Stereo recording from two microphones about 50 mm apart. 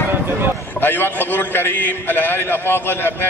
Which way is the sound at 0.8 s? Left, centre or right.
Left.